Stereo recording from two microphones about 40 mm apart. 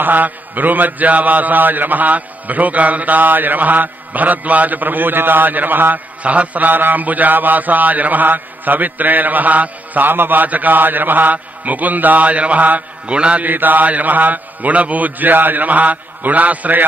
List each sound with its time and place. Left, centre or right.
0.0 s mantra: right
6.2 s mantra: right
13.1 s mantra: right
13.4 s mantra: right